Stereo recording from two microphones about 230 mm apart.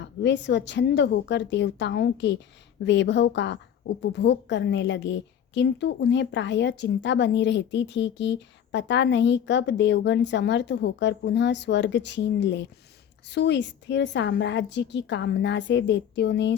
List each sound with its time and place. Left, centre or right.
0.0 s a woman's voice: left